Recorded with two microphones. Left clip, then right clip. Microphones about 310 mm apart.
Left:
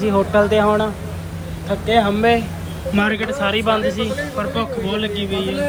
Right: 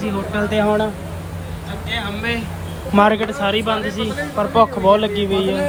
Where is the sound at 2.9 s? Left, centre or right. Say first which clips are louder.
Right 5 dB; centre.